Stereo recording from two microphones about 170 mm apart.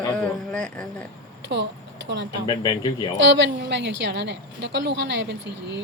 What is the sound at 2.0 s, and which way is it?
Speech, 90° right.